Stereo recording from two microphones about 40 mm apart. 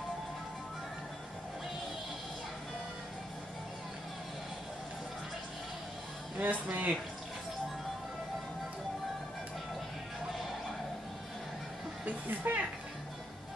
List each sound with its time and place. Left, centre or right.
6.4 s speech: right
12.0 s speech: right